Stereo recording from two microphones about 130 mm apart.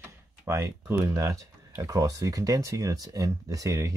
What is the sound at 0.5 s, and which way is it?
Speech, 25° right (ahead or behind).